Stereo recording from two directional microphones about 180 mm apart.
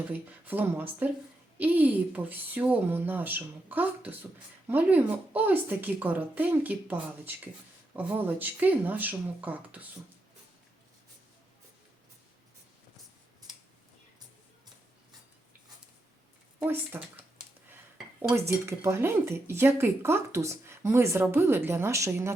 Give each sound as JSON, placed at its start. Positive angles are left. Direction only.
{"t": 0.1, "sound": "speech", "side_deg": -10}
{"t": 16.6, "sound": "speech", "side_deg": -10}
{"t": 18.3, "sound": "speech", "side_deg": -15}